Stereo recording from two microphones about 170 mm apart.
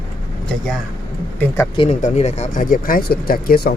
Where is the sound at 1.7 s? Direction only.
30° left (ahead or behind).